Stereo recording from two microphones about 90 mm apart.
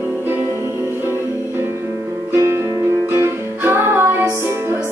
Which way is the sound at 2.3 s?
30° right (ahead or behind).